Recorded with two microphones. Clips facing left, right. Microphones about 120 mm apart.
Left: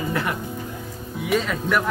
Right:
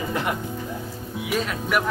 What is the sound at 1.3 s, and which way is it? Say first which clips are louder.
Speech: left 3 dB; 5° right (ahead or behind).